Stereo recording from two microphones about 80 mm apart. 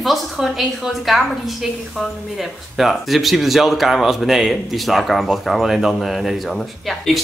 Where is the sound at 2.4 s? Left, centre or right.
Centre.